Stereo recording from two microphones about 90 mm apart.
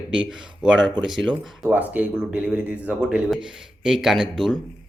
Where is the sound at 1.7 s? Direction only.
20° right (ahead or behind).